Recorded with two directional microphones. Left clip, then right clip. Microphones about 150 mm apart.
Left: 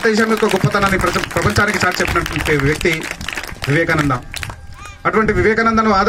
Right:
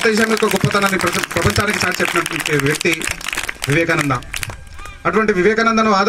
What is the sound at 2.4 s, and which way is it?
Speech, 65° left (ahead or behind).